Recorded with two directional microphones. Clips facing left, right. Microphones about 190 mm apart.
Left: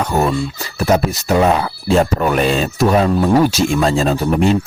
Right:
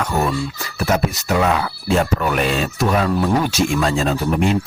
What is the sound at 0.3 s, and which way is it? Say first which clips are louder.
Speech: left 3 dB; 25° left (ahead or behind).